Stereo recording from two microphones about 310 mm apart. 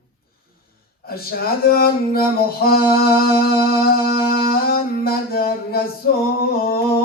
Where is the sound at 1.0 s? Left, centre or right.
Left.